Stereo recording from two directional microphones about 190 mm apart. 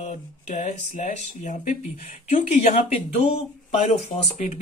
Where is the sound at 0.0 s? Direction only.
40° left (ahead or behind).